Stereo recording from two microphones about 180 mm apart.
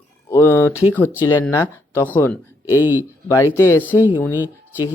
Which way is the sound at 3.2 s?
15° left (ahead or behind).